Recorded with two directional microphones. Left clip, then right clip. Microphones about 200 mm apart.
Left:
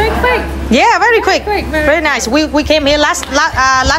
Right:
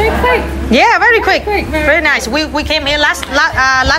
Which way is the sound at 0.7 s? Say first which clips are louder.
Even; 15° left (ahead or behind).